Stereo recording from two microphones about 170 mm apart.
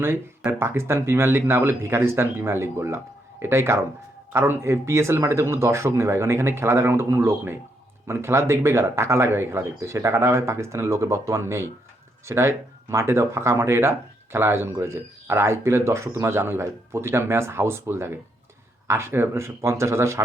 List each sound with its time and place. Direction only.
0.0 s speech: 15° right (ahead or behind)